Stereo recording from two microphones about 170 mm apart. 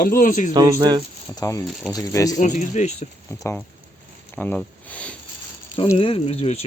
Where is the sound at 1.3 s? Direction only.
20° left (ahead or behind).